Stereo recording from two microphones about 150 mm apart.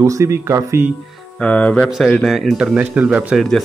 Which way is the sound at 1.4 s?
10° left (ahead or behind).